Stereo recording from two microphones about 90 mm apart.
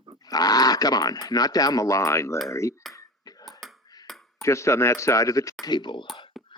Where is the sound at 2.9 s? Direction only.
45° left (ahead or behind).